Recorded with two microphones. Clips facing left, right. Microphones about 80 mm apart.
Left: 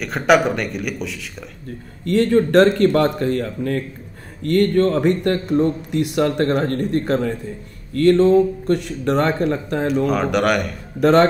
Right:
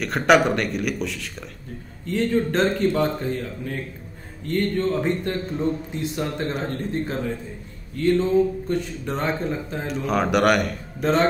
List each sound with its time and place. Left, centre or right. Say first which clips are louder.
0.0 s speech: left 2 dB; centre
2.0 s speech: left 6 dB; left
10.0 s speech: right 4 dB; centre
11.0 s speech: left 7 dB; left